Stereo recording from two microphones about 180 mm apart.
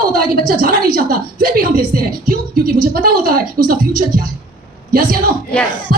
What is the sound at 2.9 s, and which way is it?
A woman's voice, 50° right (ahead or behind).